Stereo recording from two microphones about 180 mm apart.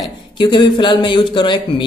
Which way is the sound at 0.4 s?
25° left (ahead or behind).